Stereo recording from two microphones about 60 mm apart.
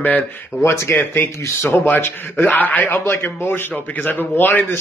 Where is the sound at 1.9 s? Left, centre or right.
Left.